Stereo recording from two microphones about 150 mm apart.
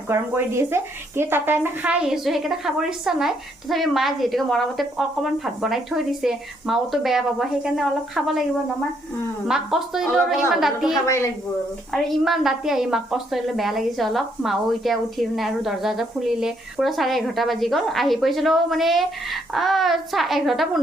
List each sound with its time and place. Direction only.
0.1 s a woman's voice: 15° right (ahead or behind); by 8.4 s centre (ahead or behind)
9.5 s a woman's voice: 5° right (ahead or behind)
11.0 s speech: 20° left (ahead or behind)
11.9 s a woman's voice: centre (ahead or behind)